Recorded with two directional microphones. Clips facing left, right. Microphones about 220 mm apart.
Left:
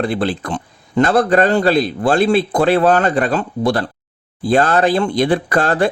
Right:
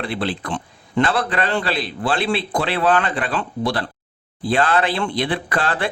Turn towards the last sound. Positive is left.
turn(degrees=45)  # may be behind; listen again after turning